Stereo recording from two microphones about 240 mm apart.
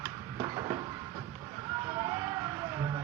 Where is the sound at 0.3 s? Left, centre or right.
Centre.